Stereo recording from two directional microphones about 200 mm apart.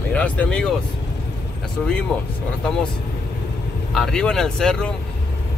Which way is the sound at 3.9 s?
5° left (ahead or behind).